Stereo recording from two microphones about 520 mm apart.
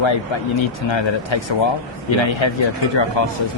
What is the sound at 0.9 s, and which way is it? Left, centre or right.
Speech, left.